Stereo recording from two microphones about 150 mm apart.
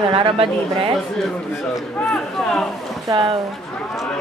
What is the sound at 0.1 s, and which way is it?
Speech, 40° right (ahead or behind).